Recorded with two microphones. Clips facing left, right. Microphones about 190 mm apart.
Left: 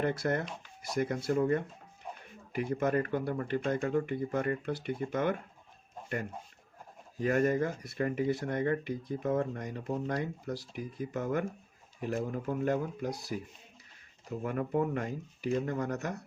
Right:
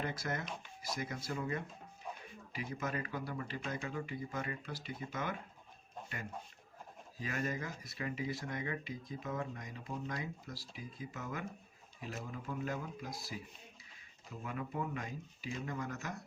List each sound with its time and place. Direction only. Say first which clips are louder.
0.0 s speech: left 9 dB; 60° left (ahead or behind)
7.2 s speech: left 12 dB; 50° left (ahead or behind)